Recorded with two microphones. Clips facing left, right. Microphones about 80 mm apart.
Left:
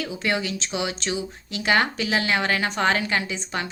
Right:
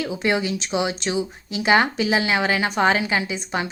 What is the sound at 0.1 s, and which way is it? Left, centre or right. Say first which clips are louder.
Speech: right 4 dB; right.